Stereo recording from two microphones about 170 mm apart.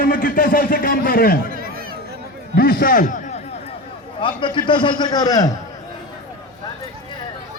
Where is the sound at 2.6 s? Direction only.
60° left (ahead or behind).